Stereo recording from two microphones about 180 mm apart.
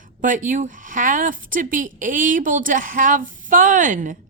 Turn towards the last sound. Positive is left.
turn(degrees=-45)  # may be behind; listen again after turning